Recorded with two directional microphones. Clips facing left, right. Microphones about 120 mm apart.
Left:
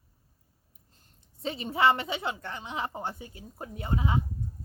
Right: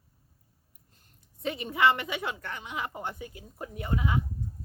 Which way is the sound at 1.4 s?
30° left (ahead or behind).